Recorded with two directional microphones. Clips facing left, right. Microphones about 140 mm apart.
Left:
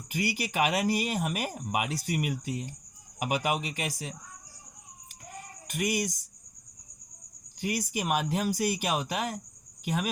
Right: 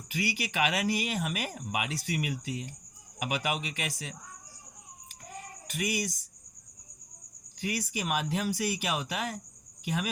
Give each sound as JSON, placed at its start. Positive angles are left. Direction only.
{"t": 0.1, "sound": "speech", "side_deg": 45}
{"t": 5.7, "sound": "speech", "side_deg": 45}
{"t": 7.7, "sound": "speech", "side_deg": 40}
{"t": 9.8, "sound": "cricket", "side_deg": 40}